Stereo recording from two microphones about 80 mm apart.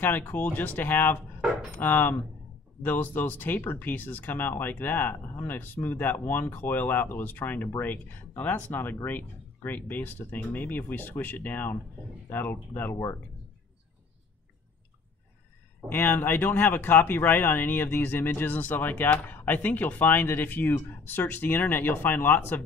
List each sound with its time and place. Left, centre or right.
0.0 s speech: left
12.9 s speech: left
15.9 s speech: left